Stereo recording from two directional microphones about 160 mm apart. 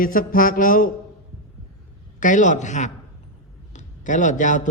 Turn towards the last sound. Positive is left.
turn(degrees=50)  # may be behind; listen again after turning